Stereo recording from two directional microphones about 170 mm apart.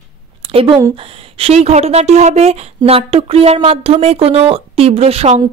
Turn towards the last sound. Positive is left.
turn(degrees=-35)  # may be behind; listen again after turning